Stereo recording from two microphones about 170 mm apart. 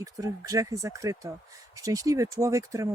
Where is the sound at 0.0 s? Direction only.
20° right (ahead or behind).